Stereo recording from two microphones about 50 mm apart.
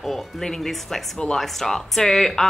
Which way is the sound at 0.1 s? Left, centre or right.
Centre.